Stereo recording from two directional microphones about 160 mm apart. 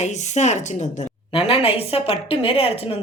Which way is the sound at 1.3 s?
35° left (ahead or behind).